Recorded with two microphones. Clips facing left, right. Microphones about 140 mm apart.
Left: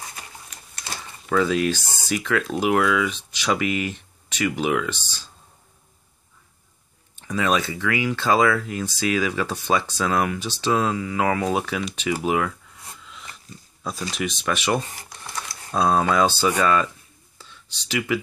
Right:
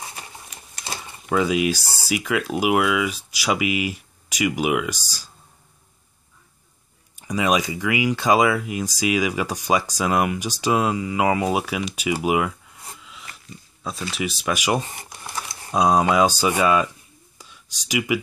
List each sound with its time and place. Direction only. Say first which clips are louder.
1.2 s speech: even; 10° right (ahead or behind)
1.8 s speech: right 1 dB; 35° right (ahead or behind)
2.0 s speech: even; 10° right (ahead or behind)
7.2 s speech: right 1 dB; 10° right (ahead or behind)
14.1 s speech: right 1 dB; 5° right (ahead or behind)
17.4 s a sound: left 1 dB; 10° right (ahead or behind)